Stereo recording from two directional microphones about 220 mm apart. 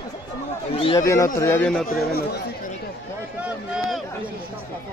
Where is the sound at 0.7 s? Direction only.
25° left (ahead or behind).